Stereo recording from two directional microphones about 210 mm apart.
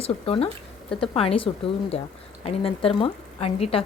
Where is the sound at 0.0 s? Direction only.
25° left (ahead or behind).